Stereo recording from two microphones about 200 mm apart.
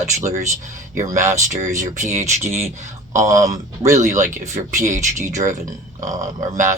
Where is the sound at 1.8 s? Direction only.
35° right (ahead or behind).